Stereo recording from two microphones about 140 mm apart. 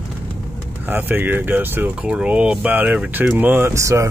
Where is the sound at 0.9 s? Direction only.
15° right (ahead or behind).